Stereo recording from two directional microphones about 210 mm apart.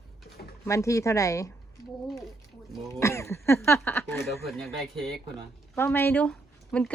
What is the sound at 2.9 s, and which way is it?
Speech, 15° left (ahead or behind).